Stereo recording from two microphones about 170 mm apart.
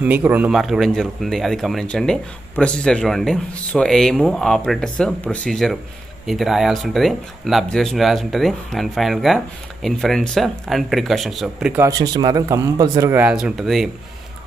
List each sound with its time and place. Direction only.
0.0 s speech: 10° right (ahead or behind)
11.8 s speech: 20° right (ahead or behind); by 13.8 s centre (ahead or behind)